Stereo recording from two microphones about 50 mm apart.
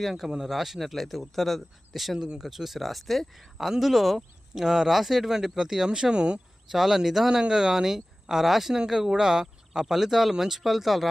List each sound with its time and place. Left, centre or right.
0.0 s speech: centre
2.1 s speech: centre
2.5 s speech: centre
6.7 s speech: centre